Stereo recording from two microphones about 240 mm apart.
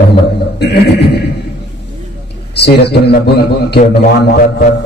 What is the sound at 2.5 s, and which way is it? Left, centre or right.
Speech, left.